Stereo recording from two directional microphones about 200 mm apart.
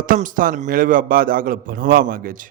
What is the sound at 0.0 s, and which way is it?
A man's voice, 40° right (ahead or behind).